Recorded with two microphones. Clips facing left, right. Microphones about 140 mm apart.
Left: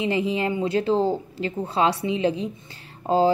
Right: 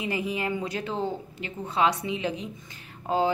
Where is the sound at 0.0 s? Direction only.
25° left (ahead or behind).